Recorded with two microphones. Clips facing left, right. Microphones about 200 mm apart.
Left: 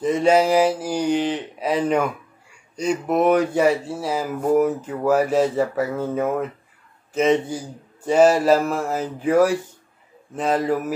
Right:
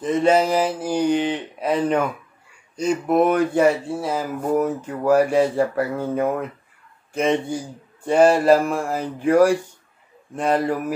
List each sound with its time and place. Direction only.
0.0 s speech: 10° left (ahead or behind)
2.7 s speech: 5° right (ahead or behind)
3.3 s speech: 10° left (ahead or behind)